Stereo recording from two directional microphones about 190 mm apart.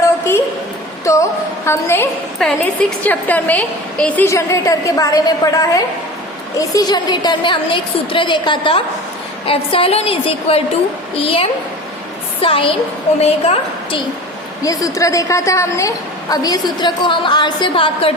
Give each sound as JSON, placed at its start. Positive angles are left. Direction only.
{"t": 1.1, "sound": "music", "side_deg": 15}
{"t": 1.6, "sound": "a woman's voice", "side_deg": 15}
{"t": 2.4, "sound": "a woman's voice", "side_deg": 5}
{"t": 14.6, "sound": "a woman's voice", "side_deg": 20}